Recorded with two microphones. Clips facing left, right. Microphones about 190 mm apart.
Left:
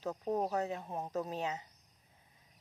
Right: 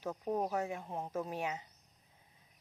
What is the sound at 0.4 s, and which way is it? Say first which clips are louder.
Speech: left 1 dB; 10° right (ahead or behind).